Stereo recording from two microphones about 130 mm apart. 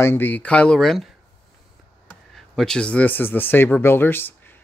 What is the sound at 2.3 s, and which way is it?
Speech, 5° left (ahead or behind).